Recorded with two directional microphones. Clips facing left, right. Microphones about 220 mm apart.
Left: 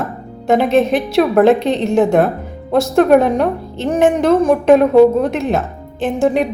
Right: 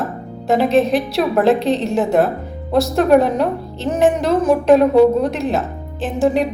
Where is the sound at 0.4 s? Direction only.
Centre (ahead or behind).